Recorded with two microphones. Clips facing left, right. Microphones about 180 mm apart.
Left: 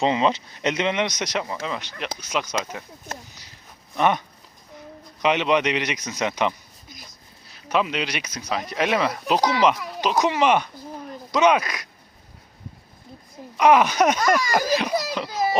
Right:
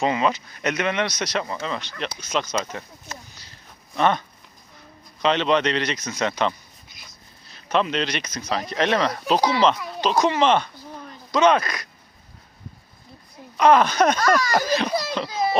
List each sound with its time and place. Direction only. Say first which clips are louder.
0.0 s speech: left 1 dB; 25° left (ahead or behind)
3.9 s speech: even; 15° left (ahead or behind)
5.2 s speech: even; 10° left (ahead or behind)
6.8 s a sound: left 7 dB; 40° left (ahead or behind)
7.5 s speech: right 1 dB; 10° left (ahead or behind)
13.6 s speech: even; 10° left (ahead or behind)